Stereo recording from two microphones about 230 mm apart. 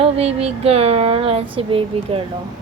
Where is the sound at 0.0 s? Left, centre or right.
Right.